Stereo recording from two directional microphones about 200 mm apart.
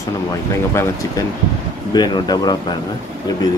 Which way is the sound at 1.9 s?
20° left (ahead or behind).